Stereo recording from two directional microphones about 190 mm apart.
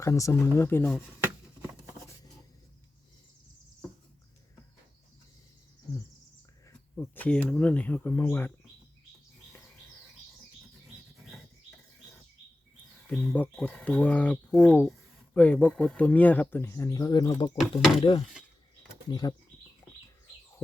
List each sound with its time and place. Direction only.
0.0 s speech: 15° left (ahead or behind)
6.7 s speech: 10° left (ahead or behind)
13.1 s speech: 5° left (ahead or behind); by 17.6 s 20° left (ahead or behind)
17.6 s speech: centre (ahead or behind)
19.2 s speech: 20° left (ahead or behind)